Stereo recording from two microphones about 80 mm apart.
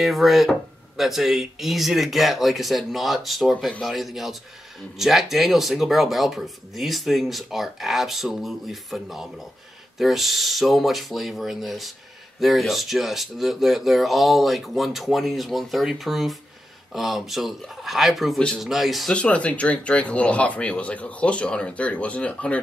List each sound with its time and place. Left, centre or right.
0.0 s speech: centre
19.1 s speech: centre